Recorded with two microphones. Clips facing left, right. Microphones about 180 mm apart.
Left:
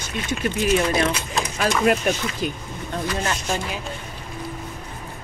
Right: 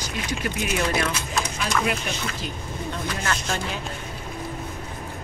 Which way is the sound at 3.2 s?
20° left (ahead or behind).